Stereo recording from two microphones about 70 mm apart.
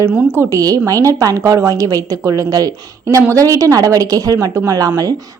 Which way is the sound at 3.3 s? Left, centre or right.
Right.